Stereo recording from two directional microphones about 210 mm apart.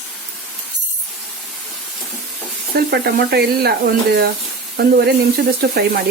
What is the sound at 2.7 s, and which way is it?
Speech, 50° right (ahead or behind).